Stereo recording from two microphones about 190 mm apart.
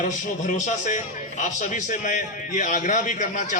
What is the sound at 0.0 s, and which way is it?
A man's voice, 40° left (ahead or behind).